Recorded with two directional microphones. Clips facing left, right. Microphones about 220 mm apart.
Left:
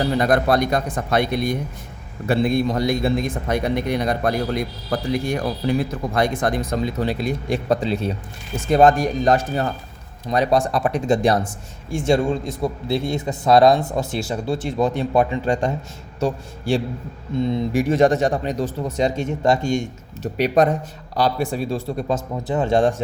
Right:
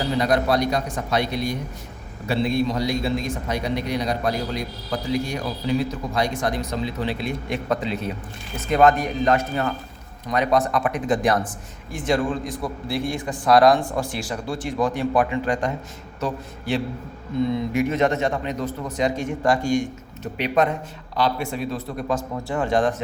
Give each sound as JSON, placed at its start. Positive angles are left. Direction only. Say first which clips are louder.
{"t": 0.2, "sound": "a man's voice", "louder": "left 1 dB", "side_deg": 50}
{"t": 20.3, "sound": "a man's voice", "louder": "left 4 dB", "side_deg": 40}